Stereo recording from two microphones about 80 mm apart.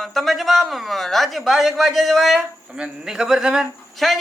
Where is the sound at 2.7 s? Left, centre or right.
Centre.